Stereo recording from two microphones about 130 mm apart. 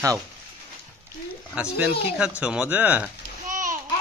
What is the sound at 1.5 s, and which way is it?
Speech, 10° right (ahead or behind).